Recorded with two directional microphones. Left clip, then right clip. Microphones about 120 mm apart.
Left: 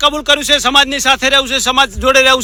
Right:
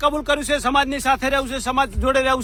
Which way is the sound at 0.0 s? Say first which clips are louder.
Left 8 dB; 20° left (ahead or behind).